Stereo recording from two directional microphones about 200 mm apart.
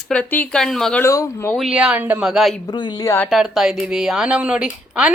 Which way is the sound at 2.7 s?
20° left (ahead or behind).